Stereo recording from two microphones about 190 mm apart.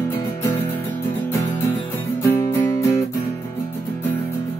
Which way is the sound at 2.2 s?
10° left (ahead or behind).